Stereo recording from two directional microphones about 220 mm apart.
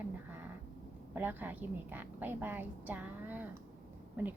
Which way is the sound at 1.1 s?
10° right (ahead or behind).